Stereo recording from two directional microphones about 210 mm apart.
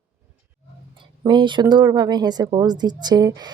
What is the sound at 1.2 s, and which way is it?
Speech, 20° right (ahead or behind).